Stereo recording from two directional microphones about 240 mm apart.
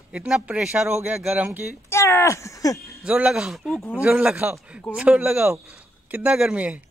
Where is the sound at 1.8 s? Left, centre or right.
Centre.